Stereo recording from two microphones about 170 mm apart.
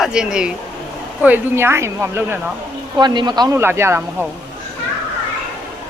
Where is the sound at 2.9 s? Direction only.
25° right (ahead or behind).